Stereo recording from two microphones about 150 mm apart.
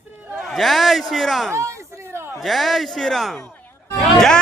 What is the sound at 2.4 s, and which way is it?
Speech, centre (ahead or behind).